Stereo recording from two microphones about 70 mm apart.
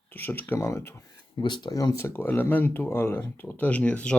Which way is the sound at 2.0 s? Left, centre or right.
Left.